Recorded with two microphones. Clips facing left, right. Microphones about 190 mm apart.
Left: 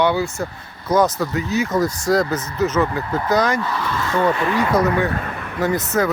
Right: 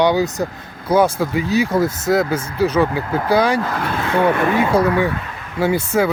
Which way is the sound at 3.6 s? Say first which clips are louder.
Right 2 dB; 55° right (ahead or behind).